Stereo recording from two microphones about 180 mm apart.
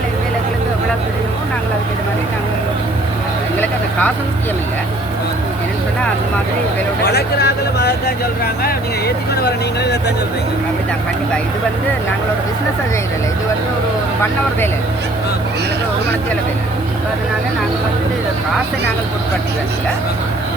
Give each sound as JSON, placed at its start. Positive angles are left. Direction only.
{"t": 7.0, "sound": "speech", "side_deg": 65}